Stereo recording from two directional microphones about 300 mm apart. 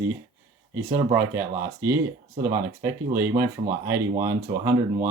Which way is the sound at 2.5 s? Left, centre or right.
Centre.